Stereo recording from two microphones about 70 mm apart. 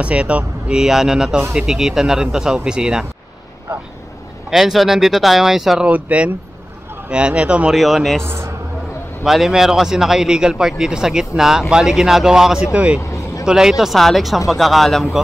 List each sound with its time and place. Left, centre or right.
0.0 s speech: centre
4.5 s speech: centre
5.9 s speech: right
7.7 s speech: centre
8.2 s a man's voice: right
9.2 s speech: centre
13.0 s vehicle: left
13.5 s speech: centre